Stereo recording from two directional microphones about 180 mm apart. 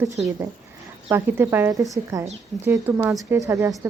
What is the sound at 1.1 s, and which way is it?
A woman's voice, 10° right (ahead or behind).